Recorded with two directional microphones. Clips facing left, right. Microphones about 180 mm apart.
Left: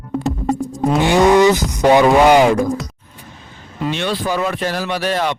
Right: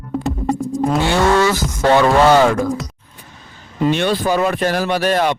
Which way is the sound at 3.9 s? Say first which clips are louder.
Right 3 dB; 50° right (ahead or behind).